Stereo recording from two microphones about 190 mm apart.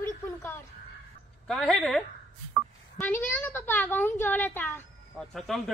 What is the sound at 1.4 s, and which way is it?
Speech, 5° left (ahead or behind).